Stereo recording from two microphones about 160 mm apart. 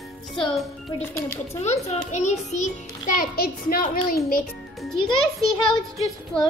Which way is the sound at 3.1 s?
65° left (ahead or behind).